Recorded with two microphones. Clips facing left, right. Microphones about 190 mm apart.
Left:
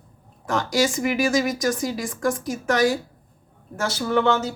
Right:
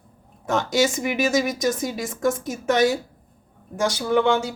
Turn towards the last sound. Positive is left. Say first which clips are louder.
# right 1 dB
turn(degrees=-10)  # may be behind; listen again after turning